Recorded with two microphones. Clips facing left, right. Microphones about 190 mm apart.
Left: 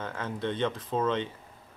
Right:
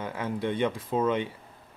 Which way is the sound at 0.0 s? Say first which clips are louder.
Right 3 dB; 10° right (ahead or behind).